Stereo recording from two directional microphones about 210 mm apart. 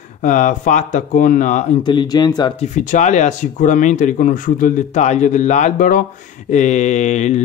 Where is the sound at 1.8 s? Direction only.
20° left (ahead or behind).